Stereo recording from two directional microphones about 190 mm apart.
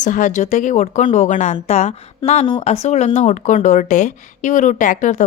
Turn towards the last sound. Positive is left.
turn(degrees=40)  # may be behind; listen again after turning